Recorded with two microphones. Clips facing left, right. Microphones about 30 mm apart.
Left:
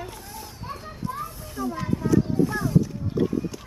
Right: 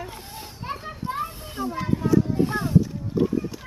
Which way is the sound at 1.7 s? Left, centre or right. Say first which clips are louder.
Right 2 dB; centre.